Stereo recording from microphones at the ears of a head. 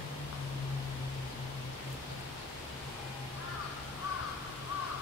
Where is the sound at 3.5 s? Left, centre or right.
Left.